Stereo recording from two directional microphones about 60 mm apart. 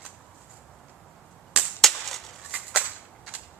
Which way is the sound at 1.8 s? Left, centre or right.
Centre.